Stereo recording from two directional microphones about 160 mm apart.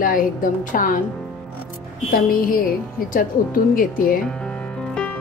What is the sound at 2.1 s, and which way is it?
A woman's voice, 65° left (ahead or behind).